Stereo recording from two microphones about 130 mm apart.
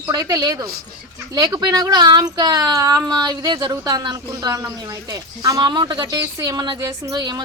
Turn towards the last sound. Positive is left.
turn(degrees=-30)  # may be behind; listen again after turning